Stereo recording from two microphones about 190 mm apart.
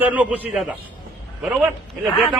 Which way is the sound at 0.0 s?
10° right (ahead or behind).